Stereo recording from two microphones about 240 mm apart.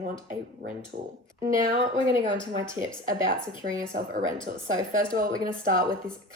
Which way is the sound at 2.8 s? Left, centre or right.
Right.